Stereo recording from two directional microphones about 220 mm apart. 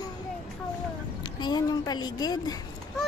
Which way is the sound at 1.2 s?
20° left (ahead or behind).